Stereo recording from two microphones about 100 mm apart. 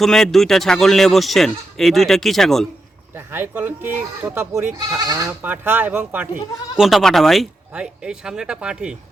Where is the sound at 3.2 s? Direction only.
25° right (ahead or behind).